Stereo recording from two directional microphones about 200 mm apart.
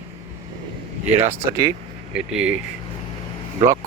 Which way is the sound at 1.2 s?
10° right (ahead or behind).